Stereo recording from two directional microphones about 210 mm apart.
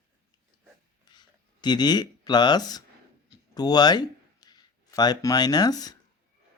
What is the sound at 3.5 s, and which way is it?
A man's voice, 20° left (ahead or behind).